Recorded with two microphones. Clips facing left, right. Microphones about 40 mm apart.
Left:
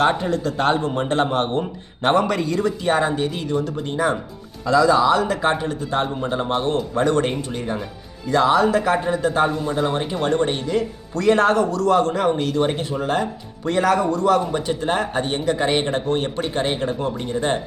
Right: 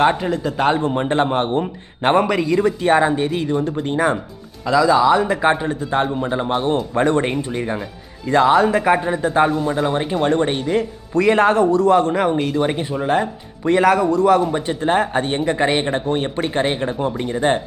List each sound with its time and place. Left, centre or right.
0.1 s speech: centre
0.9 s speech: right
2.2 s speech: centre
2.6 s speech: right
3.6 s speech: right
4.8 s speech: centre
6.1 s speech: centre
6.9 s speech: right
8.3 s speech: right
11.3 s speech: centre
12.8 s speech: right
14.0 s speech: centre
14.5 s speech: centre